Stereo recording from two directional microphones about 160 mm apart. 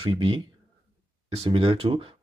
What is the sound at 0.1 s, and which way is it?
Speech, 35° right (ahead or behind).